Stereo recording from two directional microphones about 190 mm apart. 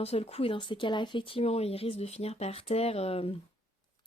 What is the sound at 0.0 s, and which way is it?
Speech, 30° left (ahead or behind).